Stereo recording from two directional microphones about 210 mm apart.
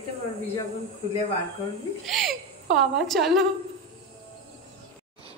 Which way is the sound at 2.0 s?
Centre (ahead or behind).